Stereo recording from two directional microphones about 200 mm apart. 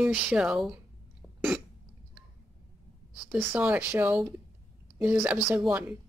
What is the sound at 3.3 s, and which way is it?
A woman's voice, 10° right (ahead or behind).